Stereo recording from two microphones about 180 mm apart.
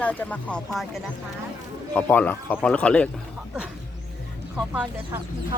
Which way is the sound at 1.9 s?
10° left (ahead or behind).